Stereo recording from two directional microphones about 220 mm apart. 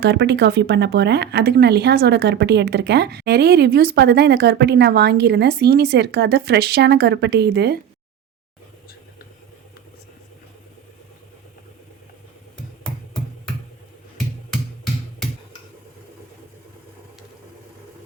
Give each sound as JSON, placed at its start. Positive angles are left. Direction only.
{"t": 0.0, "sound": "speech", "side_deg": -50}